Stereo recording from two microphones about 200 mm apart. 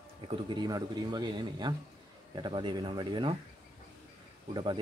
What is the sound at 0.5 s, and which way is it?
A man's voice, 20° right (ahead or behind).